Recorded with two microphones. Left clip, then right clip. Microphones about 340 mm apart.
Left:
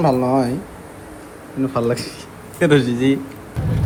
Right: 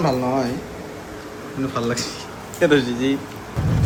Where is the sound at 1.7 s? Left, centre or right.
Centre.